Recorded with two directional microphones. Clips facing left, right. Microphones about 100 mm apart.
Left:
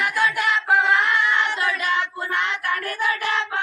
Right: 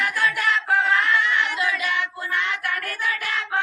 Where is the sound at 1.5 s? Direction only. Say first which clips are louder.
Left 2 dB; 40° left (ahead or behind).